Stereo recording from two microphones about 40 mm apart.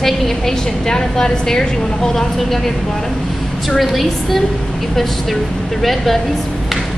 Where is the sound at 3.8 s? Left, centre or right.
Centre.